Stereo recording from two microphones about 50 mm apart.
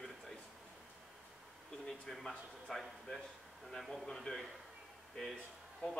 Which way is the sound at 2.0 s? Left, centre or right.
Centre.